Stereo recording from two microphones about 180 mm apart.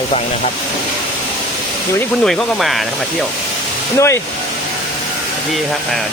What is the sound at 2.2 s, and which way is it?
Speech, centre (ahead or behind).